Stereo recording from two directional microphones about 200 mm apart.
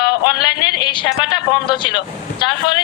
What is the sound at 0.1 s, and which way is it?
Speech, 20° left (ahead or behind).